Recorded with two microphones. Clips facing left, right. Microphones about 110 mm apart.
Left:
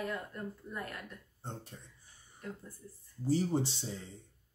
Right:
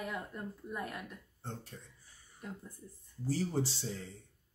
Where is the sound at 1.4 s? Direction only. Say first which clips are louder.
Even; 20° left (ahead or behind).